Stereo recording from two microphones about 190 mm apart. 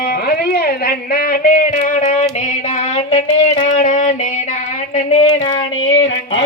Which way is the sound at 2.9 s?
35° left (ahead or behind).